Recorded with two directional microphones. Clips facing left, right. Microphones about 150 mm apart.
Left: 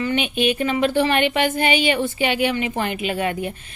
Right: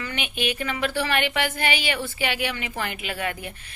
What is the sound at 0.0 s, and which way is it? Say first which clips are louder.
A woman's voice: left 8 dB; 20° left (ahead or behind).